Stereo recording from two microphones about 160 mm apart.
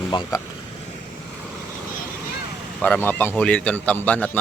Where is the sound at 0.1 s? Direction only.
25° left (ahead or behind).